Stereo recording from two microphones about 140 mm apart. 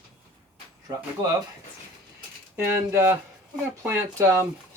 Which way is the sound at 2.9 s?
20° right (ahead or behind).